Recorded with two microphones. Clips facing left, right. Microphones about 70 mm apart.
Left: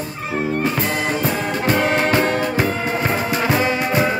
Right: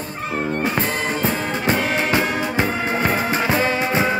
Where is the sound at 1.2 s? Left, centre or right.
Right.